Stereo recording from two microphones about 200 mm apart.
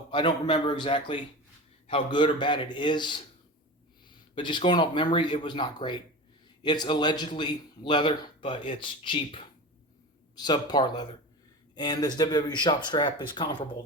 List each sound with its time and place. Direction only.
0.1 s a man's voice: 25° left (ahead or behind)
4.4 s a man's voice: 25° left (ahead or behind)